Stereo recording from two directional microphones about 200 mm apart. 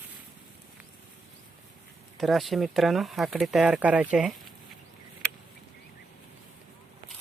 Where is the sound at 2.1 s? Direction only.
Centre (ahead or behind).